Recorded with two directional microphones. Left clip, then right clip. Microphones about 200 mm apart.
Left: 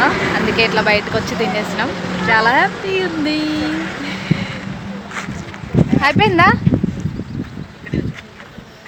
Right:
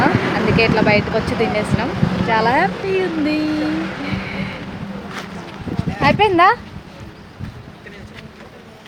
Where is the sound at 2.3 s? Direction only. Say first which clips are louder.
Left 3 dB; centre (ahead or behind).